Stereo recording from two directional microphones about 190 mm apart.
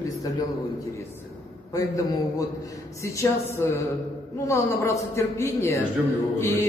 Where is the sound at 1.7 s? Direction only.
20° left (ahead or behind).